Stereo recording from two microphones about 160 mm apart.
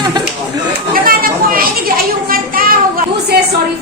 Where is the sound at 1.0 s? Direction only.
60° right (ahead or behind).